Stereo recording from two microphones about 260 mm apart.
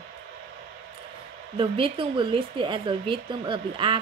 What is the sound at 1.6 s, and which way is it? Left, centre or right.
Speech, right.